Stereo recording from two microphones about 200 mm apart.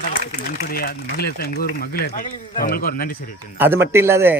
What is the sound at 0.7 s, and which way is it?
Speech, 50° left (ahead or behind).